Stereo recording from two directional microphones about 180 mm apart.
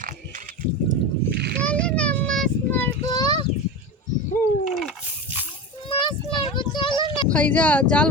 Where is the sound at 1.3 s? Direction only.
65° right (ahead or behind).